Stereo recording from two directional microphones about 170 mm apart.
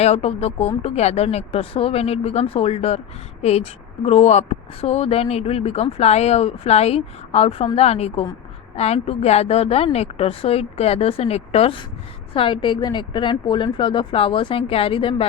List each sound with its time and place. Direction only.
0.0 s a woman's voice: 35° left (ahead or behind)